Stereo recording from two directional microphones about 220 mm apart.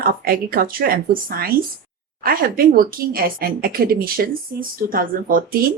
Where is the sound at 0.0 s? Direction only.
40° right (ahead or behind).